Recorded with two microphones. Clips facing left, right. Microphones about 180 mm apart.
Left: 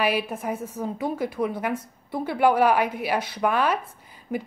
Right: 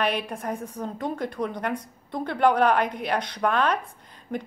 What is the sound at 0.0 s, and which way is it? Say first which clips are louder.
A woman's voice: left 2 dB; 5° left (ahead or behind).